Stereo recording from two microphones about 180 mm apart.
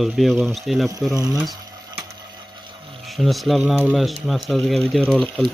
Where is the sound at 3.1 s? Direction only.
Centre (ahead or behind).